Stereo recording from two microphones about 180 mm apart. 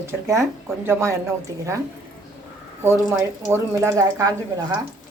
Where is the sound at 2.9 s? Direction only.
15° right (ahead or behind).